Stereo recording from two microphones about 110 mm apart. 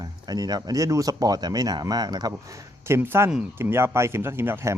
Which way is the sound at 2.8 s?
20° right (ahead or behind).